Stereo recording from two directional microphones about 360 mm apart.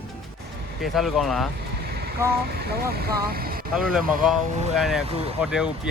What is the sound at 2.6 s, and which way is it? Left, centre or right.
Speech, right.